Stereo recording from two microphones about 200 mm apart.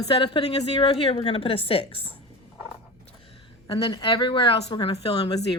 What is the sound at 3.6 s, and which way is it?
A woman's voice, 25° left (ahead or behind).